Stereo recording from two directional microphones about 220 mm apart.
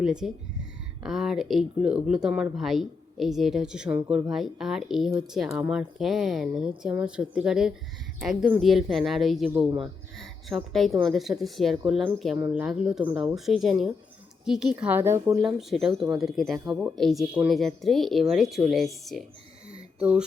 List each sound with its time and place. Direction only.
0.0 s speech: 5° right (ahead or behind)
9.6 s speech: 20° right (ahead or behind)
10.2 s a woman's voice: centre (ahead or behind)
15.4 s speech: centre (ahead or behind)
19.7 s a sound: 5° right (ahead or behind)